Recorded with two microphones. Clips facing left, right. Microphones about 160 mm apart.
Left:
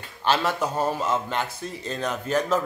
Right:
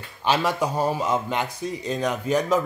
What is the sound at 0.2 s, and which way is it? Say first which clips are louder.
A man's voice: right 1 dB; 10° right (ahead or behind).